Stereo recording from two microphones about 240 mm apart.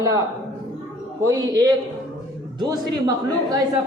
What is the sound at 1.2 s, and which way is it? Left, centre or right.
A woman's voice, centre.